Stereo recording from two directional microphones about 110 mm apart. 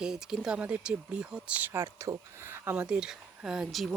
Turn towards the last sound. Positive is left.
turn(degrees=-5)  # may be behind; listen again after turning